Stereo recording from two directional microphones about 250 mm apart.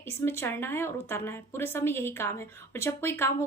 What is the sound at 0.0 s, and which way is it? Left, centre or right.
A woman's voice, centre.